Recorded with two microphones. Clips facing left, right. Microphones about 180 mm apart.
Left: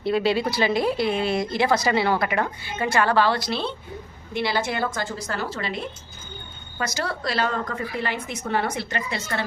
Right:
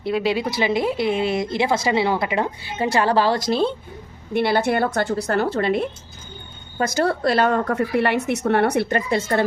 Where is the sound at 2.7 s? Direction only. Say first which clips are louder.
Right 2 dB; 35° right (ahead or behind).